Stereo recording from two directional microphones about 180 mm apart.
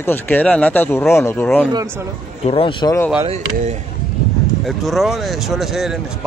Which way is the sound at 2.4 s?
30° left (ahead or behind).